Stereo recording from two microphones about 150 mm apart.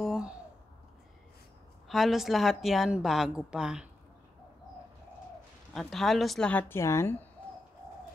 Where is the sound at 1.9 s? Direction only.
Centre (ahead or behind).